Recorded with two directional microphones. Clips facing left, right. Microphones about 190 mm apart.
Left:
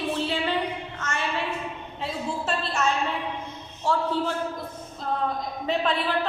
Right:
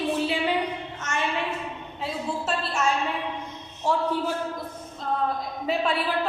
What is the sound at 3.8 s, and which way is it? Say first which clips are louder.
Speech: even; 15° right (ahead or behind).